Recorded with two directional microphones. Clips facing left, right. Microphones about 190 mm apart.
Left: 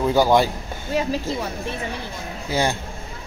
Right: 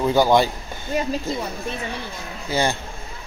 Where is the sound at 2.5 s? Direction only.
10° left (ahead or behind).